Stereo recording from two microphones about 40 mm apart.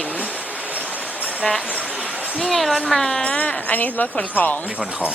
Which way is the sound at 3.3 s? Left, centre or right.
Left.